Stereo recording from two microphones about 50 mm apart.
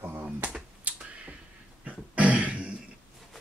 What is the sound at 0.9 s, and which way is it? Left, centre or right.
Finger snapping, right.